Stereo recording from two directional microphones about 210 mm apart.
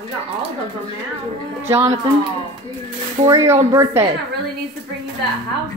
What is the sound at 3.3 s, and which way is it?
Speech, 15° right (ahead or behind).